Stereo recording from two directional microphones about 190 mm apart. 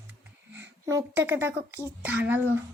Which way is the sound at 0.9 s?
15° right (ahead or behind).